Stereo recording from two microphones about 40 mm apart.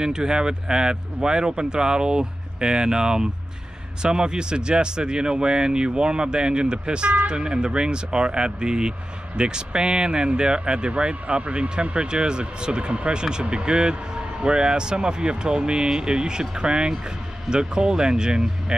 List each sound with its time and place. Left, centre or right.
0.0 s speech: centre